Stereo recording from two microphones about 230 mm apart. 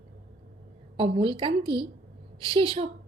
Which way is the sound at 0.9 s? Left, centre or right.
Right.